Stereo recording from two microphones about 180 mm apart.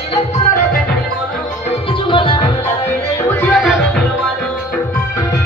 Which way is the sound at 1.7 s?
30° left (ahead or behind).